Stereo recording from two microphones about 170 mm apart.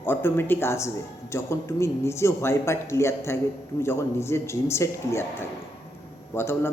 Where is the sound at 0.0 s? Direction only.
10° left (ahead or behind).